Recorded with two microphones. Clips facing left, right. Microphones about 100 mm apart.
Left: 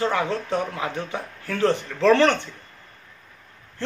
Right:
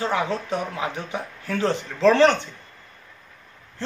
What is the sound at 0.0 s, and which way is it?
Speech, 20° right (ahead or behind).